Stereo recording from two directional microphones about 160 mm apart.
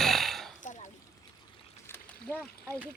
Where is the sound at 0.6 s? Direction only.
50° left (ahead or behind).